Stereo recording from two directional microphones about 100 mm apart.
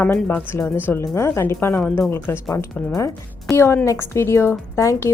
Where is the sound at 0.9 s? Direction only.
25° left (ahead or behind).